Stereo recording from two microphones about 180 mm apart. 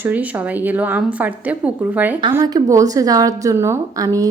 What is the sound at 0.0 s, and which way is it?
A woman's voice, 10° right (ahead or behind).